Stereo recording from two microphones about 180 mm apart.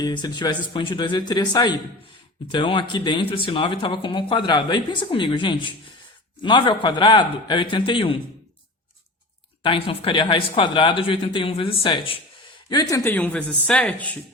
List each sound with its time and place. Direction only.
0.0 s speech: 25° left (ahead or behind)
9.6 s speech: 30° left (ahead or behind)
13.1 s speech: 10° left (ahead or behind)